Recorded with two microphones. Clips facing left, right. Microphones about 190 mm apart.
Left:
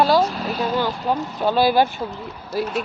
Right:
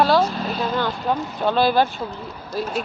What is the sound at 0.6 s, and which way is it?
Speech, 15° left (ahead or behind).